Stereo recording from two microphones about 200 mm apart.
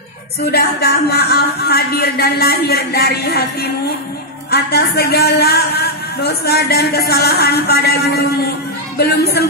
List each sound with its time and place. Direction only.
0.5 s a man's voice: 55° left (ahead or behind)